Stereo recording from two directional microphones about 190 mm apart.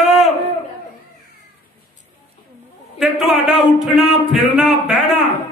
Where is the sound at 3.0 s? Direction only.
Centre (ahead or behind).